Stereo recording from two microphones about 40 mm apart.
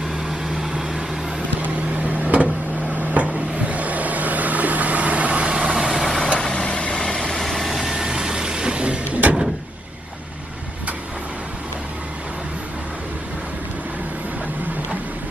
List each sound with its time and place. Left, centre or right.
0.2 s vehicle: centre
1.6 s a sound: right
5.7 s vehicle: centre
6.2 s vehicle: left
7.4 s vehicle: centre
7.9 s vehicle: centre
9.0 s a sound: right